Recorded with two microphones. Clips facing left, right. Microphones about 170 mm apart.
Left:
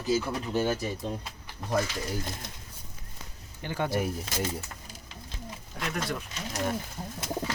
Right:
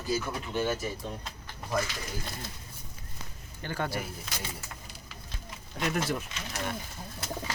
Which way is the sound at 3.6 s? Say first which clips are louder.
Left 2 dB; 15° left (ahead or behind).